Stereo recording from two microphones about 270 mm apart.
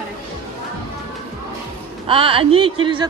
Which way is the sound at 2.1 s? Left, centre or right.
Centre.